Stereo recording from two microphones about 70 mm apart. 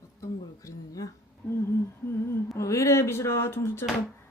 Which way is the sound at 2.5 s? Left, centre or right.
Left.